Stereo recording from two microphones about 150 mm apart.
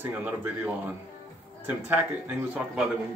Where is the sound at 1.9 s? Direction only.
10° right (ahead or behind).